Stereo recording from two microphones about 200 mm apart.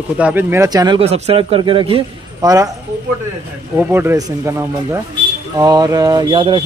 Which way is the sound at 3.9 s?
10° right (ahead or behind).